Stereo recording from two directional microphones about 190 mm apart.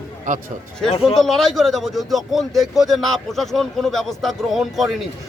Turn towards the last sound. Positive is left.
turn(degrees=0)  # may be behind; listen again after turning